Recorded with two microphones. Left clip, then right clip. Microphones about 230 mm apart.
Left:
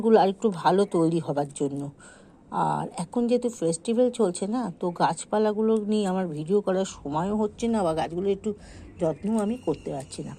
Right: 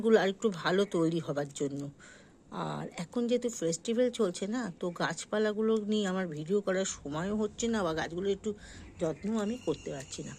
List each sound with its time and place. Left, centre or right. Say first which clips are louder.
0.0 s speech: left 6 dB; centre
2.5 s speech: left 12 dB; centre
2.9 s speech: left 6 dB; centre